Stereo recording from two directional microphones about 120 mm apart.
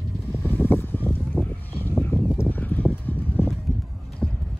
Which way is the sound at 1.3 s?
10° right (ahead or behind).